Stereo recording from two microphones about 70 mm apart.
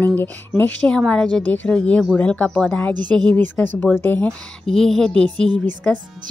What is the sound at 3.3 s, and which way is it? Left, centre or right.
Speech, left.